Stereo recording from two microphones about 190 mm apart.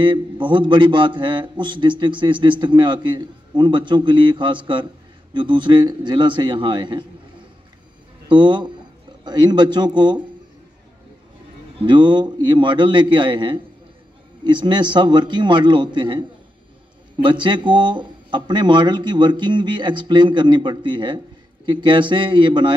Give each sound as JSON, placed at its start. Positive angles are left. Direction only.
{"t": 0.0, "sound": "speech", "side_deg": -25}
{"t": 8.3, "sound": "speech", "side_deg": -25}
{"t": 11.8, "sound": "speech", "side_deg": -25}